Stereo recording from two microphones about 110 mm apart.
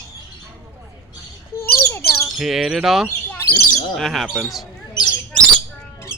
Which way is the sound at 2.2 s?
5° right (ahead or behind).